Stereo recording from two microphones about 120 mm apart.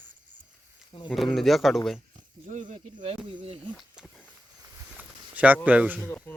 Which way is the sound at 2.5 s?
90° right.